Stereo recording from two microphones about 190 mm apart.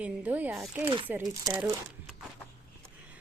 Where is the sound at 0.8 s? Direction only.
25° right (ahead or behind).